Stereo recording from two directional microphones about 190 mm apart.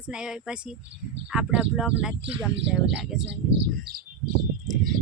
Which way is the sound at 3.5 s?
55° right (ahead or behind).